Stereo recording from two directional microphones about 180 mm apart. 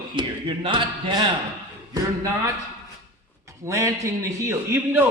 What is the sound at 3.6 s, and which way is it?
A man's voice, 15° right (ahead or behind).